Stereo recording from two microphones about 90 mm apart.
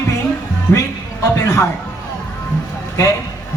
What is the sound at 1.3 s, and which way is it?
Speech, 30° left (ahead or behind).